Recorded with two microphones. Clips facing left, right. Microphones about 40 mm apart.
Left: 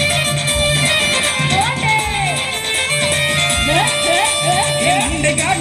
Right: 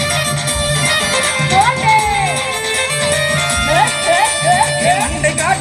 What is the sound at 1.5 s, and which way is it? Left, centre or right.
Music, left.